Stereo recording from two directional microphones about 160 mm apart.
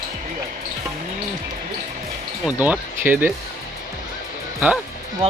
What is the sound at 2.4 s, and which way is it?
Speech, 10° right (ahead or behind).